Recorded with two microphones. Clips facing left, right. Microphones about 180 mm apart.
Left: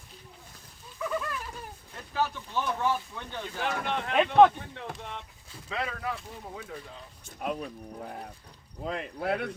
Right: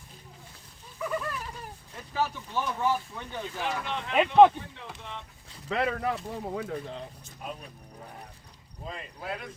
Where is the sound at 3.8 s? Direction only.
55° left (ahead or behind).